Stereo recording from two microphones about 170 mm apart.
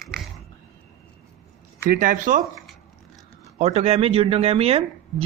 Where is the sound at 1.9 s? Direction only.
55° right (ahead or behind).